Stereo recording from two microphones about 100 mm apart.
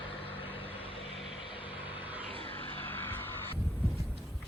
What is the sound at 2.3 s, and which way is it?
Vehicle, 70° right (ahead or behind).